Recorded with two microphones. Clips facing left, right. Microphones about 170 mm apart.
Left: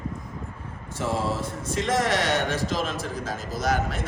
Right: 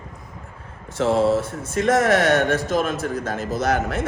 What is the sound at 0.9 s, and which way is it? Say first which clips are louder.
A man's voice: right 9 dB; 75° right (ahead or behind).